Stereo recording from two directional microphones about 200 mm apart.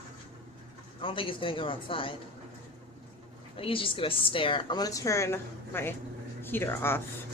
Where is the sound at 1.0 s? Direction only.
25° left (ahead or behind).